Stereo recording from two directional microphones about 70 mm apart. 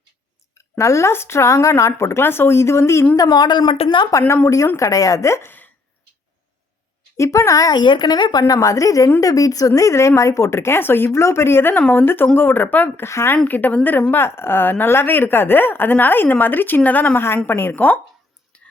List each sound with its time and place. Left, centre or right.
0.8 s speech: left
3.2 s speech: left
4.4 s speech: left
5.5 s a sound: left
7.2 s speech: left
8.5 s speech: left
11.7 s speech: left
13.5 s speech: left
18.5 s whispering: centre